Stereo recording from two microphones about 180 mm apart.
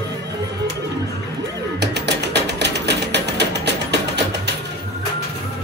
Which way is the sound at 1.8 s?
70° right (ahead or behind).